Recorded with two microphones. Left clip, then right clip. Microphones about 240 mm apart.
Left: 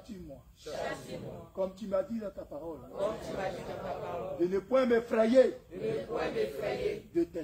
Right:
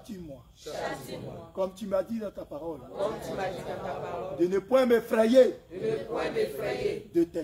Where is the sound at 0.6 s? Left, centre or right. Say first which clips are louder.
Right 3 dB; centre.